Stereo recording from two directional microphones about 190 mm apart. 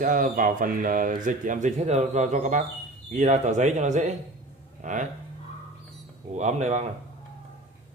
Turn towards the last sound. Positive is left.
turn(degrees=-35)  # may be behind; listen again after turning